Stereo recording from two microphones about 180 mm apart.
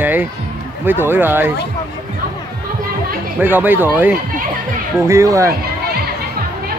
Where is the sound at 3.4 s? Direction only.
10° right (ahead or behind).